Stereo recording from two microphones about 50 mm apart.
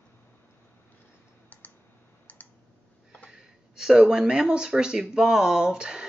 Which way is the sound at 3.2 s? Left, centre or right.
Centre.